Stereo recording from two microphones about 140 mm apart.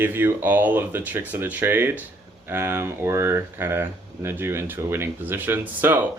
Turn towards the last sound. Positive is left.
turn(degrees=-15)  # may be behind; listen again after turning